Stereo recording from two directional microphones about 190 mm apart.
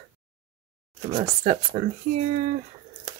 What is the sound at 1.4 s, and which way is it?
Speech, 40° right (ahead or behind).